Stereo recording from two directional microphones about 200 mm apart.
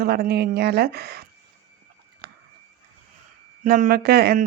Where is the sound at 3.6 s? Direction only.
45° right (ahead or behind).